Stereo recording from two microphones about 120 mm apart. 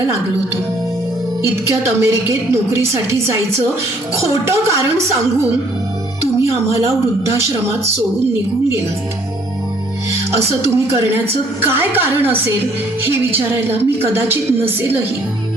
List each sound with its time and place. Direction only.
1.6 s a woman's voice: 25° right (ahead or behind)
10.6 s a woman's voice: 20° right (ahead or behind)